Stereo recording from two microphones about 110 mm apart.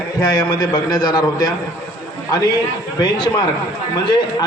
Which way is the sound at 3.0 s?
40° left (ahead or behind).